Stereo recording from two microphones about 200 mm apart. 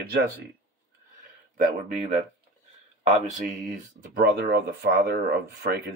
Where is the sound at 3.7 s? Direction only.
55° right (ahead or behind).